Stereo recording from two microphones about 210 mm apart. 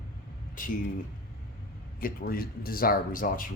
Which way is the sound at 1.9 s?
45° left (ahead or behind).